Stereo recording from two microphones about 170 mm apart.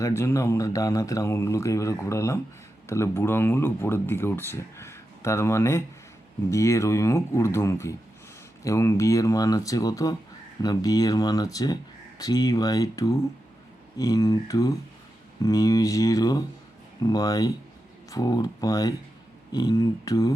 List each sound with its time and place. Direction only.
0.0 s speech: 15° left (ahead or behind)